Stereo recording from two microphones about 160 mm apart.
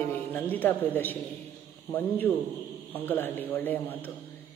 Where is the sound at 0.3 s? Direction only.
10° left (ahead or behind).